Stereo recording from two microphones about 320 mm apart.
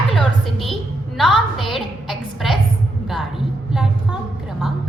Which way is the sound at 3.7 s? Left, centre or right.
Centre.